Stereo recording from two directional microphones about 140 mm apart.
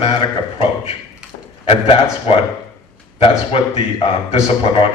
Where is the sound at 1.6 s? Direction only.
40° left (ahead or behind).